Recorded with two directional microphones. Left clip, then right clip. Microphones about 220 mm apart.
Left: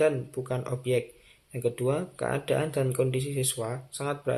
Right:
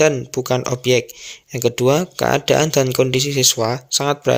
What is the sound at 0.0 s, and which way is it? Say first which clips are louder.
Speech: right 10 dB; 45° right (ahead or behind).